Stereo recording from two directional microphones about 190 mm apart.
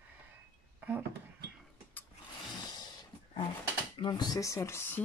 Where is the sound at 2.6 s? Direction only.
20° left (ahead or behind).